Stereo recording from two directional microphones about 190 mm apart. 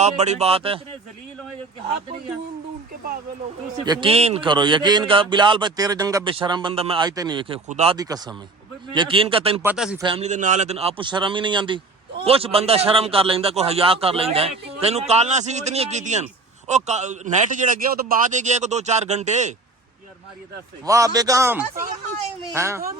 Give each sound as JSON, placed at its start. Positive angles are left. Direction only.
{"t": 0.0, "sound": "a man's voice", "side_deg": -35}
{"t": 3.8, "sound": "a man's voice", "side_deg": -25}
{"t": 7.9, "sound": "a man's voice", "side_deg": -20}
{"t": 9.7, "sound": "a man's voice", "side_deg": -5}
{"t": 10.0, "sound": "a man's voice", "side_deg": -30}
{"t": 20.8, "sound": "a man's voice", "side_deg": -15}